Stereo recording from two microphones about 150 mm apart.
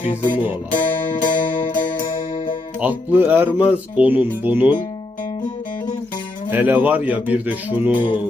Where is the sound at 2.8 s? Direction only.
15° right (ahead or behind).